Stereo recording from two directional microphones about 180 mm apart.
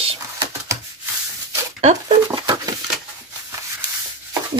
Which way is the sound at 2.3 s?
20° right (ahead or behind).